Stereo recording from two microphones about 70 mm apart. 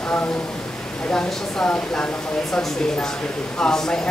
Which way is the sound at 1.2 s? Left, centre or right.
Centre.